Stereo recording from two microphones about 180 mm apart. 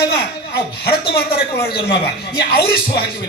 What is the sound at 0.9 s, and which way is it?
Speech, 60° left (ahead or behind).